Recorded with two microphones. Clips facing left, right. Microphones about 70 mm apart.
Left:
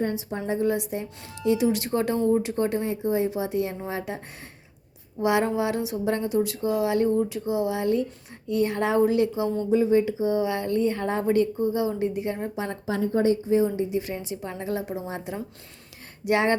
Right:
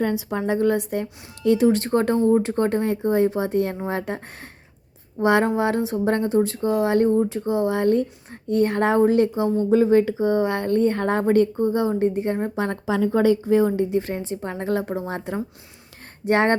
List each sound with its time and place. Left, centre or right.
0.0 s a woman's voice: right
5.2 s speech: right
13.0 s a woman's voice: right
14.0 s speech: right